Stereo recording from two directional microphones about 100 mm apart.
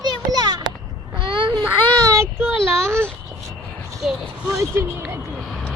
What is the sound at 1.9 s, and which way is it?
Child singing, 35° right (ahead or behind).